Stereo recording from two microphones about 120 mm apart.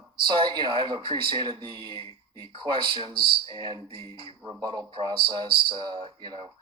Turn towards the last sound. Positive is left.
turn(degrees=-35)  # may be behind; listen again after turning